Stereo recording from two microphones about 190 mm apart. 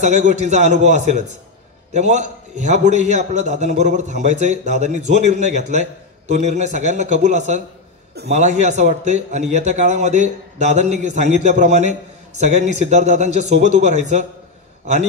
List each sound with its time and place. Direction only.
0.0 s a man's voice: 35° right (ahead or behind)